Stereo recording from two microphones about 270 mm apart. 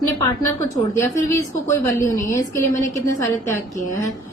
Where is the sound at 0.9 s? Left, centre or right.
Centre.